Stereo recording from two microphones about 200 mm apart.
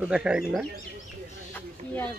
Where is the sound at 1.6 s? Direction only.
10° left (ahead or behind).